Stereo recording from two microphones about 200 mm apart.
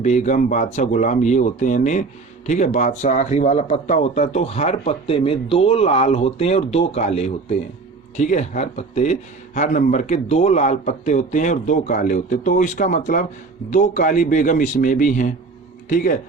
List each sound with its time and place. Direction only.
0.0 s speech: 35° left (ahead or behind)